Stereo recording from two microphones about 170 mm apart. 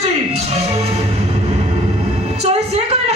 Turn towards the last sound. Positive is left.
turn(degrees=-40)  # may be behind; listen again after turning